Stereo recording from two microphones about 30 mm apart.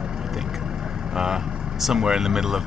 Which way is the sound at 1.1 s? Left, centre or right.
Centre.